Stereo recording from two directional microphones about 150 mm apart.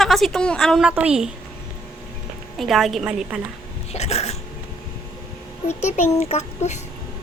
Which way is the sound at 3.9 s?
45° left (ahead or behind).